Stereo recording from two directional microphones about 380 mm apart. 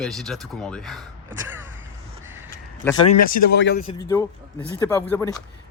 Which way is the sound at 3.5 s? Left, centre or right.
Left.